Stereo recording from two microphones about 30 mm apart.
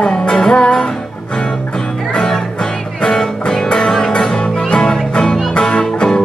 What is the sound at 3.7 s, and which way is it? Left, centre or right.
Music, left.